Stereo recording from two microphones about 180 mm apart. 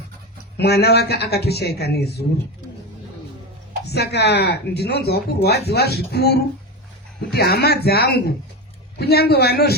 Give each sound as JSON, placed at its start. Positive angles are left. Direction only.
{"t": 0.5, "sound": "speech", "side_deg": 65}
{"t": 3.8, "sound": "speech", "side_deg": 65}